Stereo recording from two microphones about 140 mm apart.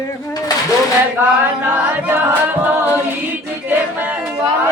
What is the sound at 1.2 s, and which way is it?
Music, 15° right (ahead or behind).